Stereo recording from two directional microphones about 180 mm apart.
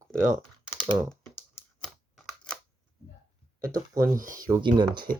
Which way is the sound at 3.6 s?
20° right (ahead or behind).